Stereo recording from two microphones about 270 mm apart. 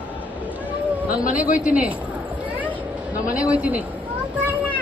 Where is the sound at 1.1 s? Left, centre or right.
Left.